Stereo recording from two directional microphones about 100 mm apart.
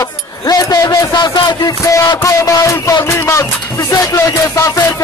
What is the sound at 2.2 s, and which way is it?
Music, 30° left (ahead or behind).